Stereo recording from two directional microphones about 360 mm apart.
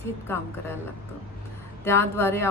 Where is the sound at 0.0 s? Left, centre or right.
Centre.